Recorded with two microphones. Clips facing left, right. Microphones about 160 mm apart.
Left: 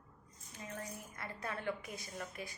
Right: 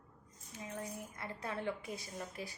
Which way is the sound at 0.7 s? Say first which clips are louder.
Right 2 dB; 20° right (ahead or behind).